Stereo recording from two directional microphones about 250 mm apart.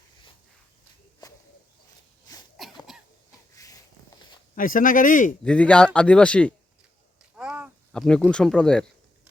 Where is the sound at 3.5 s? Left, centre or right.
Centre.